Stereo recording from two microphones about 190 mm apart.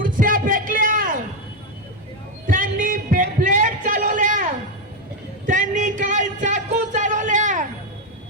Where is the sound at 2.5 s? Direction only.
45° right (ahead or behind).